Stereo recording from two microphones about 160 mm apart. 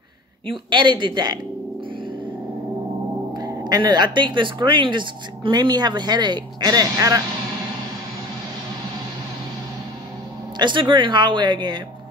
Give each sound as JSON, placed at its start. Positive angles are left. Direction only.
{"t": 0.5, "sound": "speech", "side_deg": -30}
{"t": 3.3, "sound": "speech", "side_deg": -25}
{"t": 10.6, "sound": "speech", "side_deg": -30}